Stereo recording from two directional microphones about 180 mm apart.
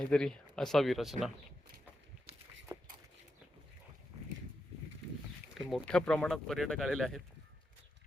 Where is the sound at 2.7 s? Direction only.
20° right (ahead or behind).